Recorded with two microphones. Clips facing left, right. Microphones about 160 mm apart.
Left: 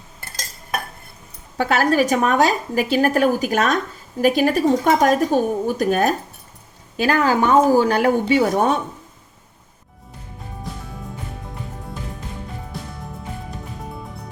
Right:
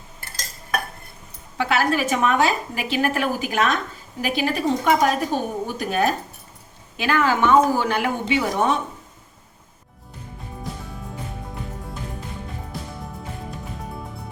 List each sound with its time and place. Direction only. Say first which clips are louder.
1.5 s a woman's voice: left 4 dB; 40° left (ahead or behind)